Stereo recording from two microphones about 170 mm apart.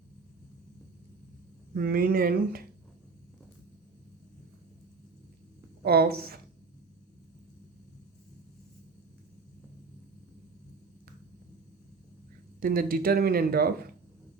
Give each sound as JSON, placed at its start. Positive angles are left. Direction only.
{"t": 1.7, "sound": "speech", "side_deg": -60}
{"t": 5.8, "sound": "speech", "side_deg": -65}
{"t": 12.5, "sound": "speech", "side_deg": -55}